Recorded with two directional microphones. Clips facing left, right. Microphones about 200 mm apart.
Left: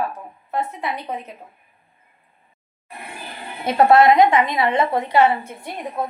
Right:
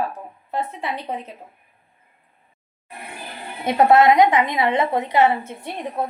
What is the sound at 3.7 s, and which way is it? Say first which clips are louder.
A woman's voice: left 1 dB; 20° right (ahead or behind).